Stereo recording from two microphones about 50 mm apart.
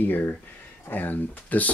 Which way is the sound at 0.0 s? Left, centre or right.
Left.